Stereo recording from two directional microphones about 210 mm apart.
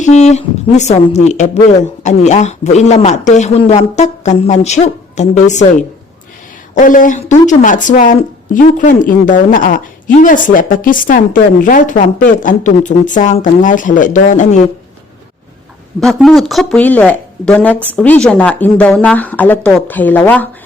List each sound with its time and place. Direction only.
0.0 s speech: 35° left (ahead or behind)
6.7 s speech: 40° left (ahead or behind)
16.0 s speech: centre (ahead or behind)